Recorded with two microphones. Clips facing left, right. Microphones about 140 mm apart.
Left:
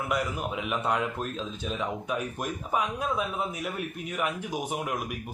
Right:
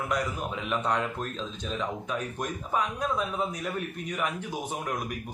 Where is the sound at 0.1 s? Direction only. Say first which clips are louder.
Left 2 dB; 5° left (ahead or behind).